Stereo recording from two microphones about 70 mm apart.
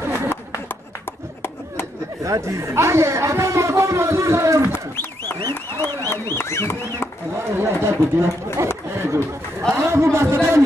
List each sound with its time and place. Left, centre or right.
2.2 s speech: right
5.5 s speech: left
7.5 s a man's voice: right